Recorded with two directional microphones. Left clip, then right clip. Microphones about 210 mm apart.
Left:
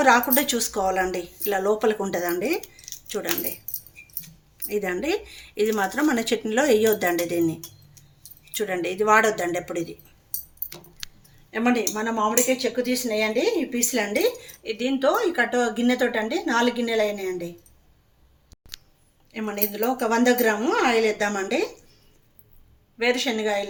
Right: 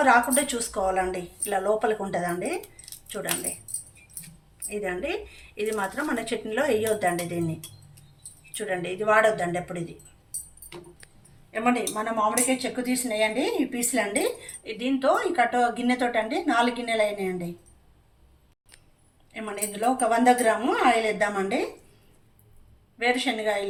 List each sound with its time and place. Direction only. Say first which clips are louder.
0.0 s speech: left 2 dB; 50° left (ahead or behind)
2.6 s keys jangling: left 3 dB; 10° left (ahead or behind)
4.7 s speech: left 4 dB; 55° left (ahead or behind)
8.5 s speech: left 4 dB; 50° left (ahead or behind)
11.5 s speech: left 2 dB; 50° left (ahead or behind)
19.3 s speech: left 4 dB; 45° left (ahead or behind)
23.0 s speech: left 2 dB; 50° left (ahead or behind)